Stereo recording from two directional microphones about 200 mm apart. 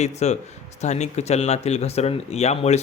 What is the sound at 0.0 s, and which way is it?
Speech, 35° left (ahead or behind).